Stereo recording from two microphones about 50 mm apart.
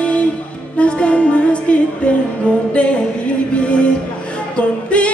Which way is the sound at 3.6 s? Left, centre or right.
Left.